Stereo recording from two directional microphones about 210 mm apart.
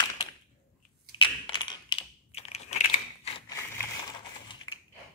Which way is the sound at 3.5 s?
15° left (ahead or behind).